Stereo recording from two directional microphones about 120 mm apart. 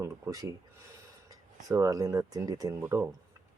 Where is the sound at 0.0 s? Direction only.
25° right (ahead or behind).